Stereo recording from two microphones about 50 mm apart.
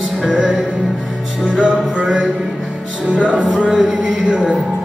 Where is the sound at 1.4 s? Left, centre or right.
Centre.